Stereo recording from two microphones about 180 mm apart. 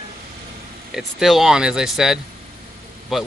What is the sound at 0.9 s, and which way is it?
Speech, centre (ahead or behind).